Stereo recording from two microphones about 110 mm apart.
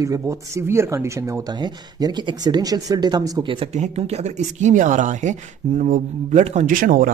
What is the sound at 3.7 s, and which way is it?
Speech, 80° right.